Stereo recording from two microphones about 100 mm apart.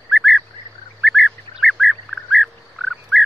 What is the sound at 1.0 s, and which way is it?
Bird, centre (ahead or behind).